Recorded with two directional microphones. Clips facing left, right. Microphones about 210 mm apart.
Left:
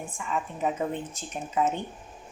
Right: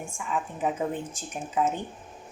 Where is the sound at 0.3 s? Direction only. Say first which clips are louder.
Even; centre (ahead or behind).